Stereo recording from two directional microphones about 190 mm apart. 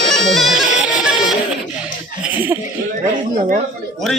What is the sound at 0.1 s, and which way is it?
Bagpipes, centre (ahead or behind).